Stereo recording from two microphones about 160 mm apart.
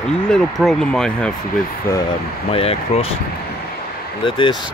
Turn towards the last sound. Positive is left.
turn(degrees=30)  # may be behind; listen again after turning